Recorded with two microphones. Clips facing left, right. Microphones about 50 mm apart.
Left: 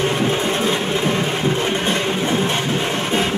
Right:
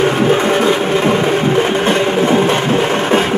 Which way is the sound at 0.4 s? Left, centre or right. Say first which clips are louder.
Right 7 dB; right.